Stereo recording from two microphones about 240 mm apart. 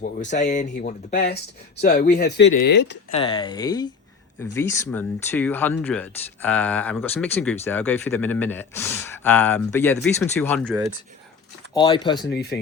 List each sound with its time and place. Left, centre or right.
0.0 s speech: left
3.1 s speech: left; by 10.8 s centre
11.7 s speech: centre
12.3 s speech: left